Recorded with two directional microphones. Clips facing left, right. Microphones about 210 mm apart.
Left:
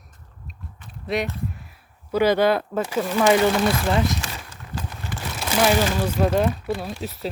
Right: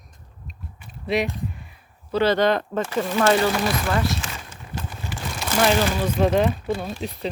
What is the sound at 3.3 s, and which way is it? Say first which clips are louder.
Speech: left 4 dB; 20° left (ahead or behind).